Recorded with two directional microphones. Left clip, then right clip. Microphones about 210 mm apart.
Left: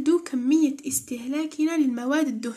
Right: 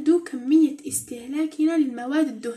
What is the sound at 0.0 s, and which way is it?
Speech, 35° left (ahead or behind).